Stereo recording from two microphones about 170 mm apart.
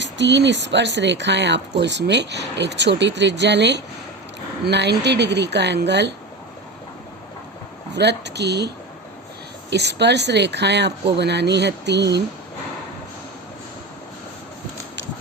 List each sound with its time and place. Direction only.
0.0 s speech: 90° right
7.9 s speech: 85° right